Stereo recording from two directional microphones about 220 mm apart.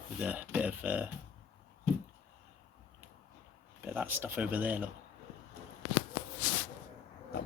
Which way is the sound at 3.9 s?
10° right (ahead or behind).